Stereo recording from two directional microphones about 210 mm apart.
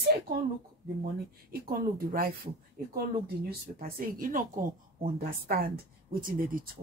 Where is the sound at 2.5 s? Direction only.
30° right (ahead or behind).